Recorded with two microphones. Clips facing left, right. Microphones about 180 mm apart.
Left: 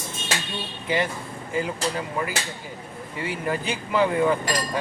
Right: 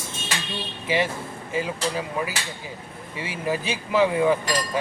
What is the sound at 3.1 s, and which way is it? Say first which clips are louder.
Speech: left 3 dB; 90° right.